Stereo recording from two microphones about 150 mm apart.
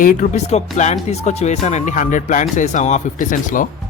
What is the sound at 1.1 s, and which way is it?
Music, 45° left (ahead or behind).